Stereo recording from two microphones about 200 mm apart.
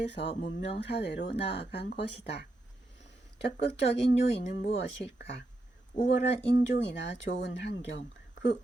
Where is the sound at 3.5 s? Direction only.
60° left (ahead or behind).